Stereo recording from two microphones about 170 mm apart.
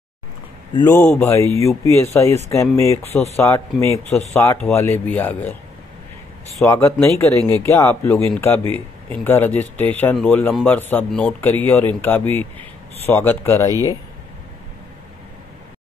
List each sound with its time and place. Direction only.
0.8 s speech: 10° left (ahead or behind)
6.6 s speech: 15° left (ahead or behind)
13.7 s speech: 20° right (ahead or behind)